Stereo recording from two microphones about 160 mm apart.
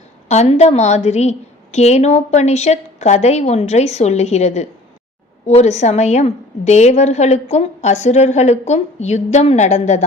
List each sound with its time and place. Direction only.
0.3 s a woman's voice: 45° left (ahead or behind)